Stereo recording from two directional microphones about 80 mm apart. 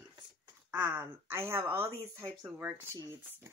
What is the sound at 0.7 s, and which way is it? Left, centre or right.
Speech, right.